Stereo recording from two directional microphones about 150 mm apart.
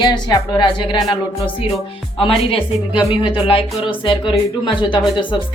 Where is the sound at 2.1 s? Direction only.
40° left (ahead or behind).